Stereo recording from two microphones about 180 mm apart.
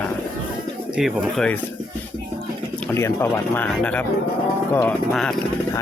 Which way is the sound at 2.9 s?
15° left (ahead or behind).